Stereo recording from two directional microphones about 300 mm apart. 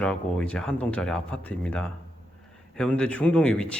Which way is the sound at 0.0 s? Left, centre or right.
Centre.